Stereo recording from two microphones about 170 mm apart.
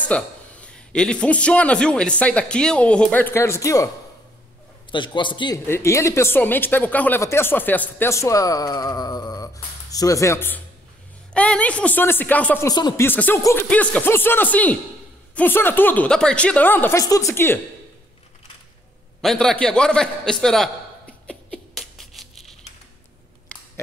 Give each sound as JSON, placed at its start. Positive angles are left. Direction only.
{"t": 0.1, "sound": "speech", "side_deg": 10}
{"t": 4.9, "sound": "a man's voice", "side_deg": 30}
{"t": 5.7, "sound": "speech", "side_deg": 15}
{"t": 12.6, "sound": "a man's voice", "side_deg": 20}
{"t": 13.0, "sound": "speech", "side_deg": 10}
{"t": 19.2, "sound": "a man's voice", "side_deg": 5}
{"t": 21.3, "sound": "a sound", "side_deg": 5}
{"t": 23.5, "sound": "scissors", "side_deg": 5}